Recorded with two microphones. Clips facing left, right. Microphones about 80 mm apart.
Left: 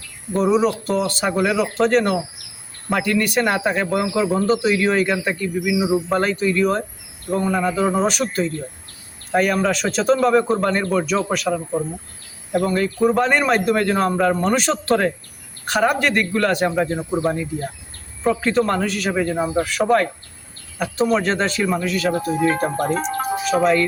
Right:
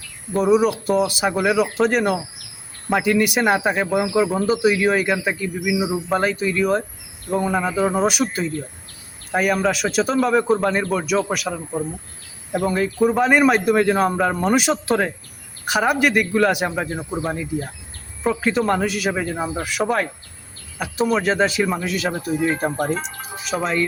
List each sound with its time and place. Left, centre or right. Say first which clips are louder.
0.3 s a man's voice: right 1 dB; centre
23.0 s speech: left 8 dB; left